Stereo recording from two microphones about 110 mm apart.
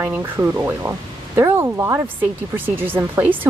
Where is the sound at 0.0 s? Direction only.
20° right (ahead or behind).